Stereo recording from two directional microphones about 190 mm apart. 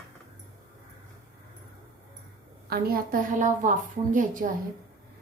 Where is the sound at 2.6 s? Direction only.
55° right (ahead or behind).